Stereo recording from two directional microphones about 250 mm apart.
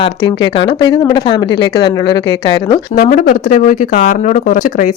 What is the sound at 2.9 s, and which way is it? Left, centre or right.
Speech, left.